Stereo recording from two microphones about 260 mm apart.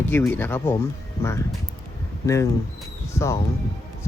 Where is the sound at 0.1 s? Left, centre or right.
Centre.